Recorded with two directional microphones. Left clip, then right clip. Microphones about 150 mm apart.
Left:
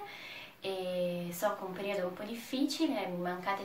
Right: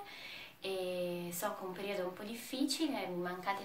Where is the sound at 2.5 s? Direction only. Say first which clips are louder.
Left 3 dB; 10° right (ahead or behind).